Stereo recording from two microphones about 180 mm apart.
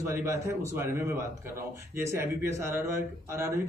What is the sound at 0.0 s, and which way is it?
A man's voice, 15° right (ahead or behind).